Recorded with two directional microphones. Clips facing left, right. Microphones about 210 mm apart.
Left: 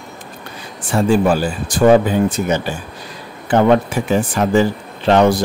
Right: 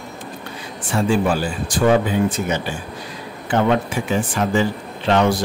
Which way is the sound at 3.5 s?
40° left (ahead or behind).